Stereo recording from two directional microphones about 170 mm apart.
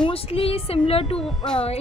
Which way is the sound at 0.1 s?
35° left (ahead or behind).